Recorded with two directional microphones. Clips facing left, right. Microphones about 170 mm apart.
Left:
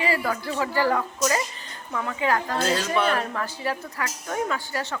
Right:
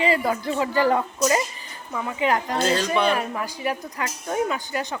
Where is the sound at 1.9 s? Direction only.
10° right (ahead or behind).